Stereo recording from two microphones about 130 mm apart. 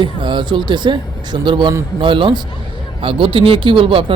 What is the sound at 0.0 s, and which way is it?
Speech, 35° right (ahead or behind).